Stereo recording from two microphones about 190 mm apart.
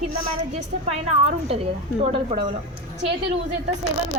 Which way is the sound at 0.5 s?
35° right (ahead or behind).